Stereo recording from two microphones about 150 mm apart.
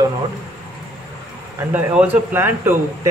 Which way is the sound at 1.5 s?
10° right (ahead or behind).